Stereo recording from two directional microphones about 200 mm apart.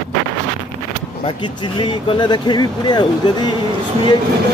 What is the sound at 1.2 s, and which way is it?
Speech, 25° left (ahead or behind).